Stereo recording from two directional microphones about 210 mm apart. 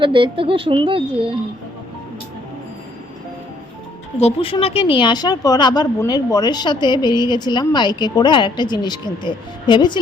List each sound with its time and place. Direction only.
0.0 s speech: 25° right (ahead or behind)
4.2 s a woman's voice: 30° left (ahead or behind)